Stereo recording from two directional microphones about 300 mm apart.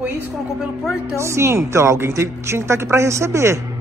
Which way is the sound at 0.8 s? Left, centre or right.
Centre.